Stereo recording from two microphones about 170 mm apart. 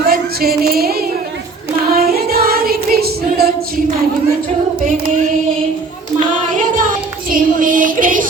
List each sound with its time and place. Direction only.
0.0 s music: 60° right (ahead or behind)
6.5 s music: 50° right (ahead or behind)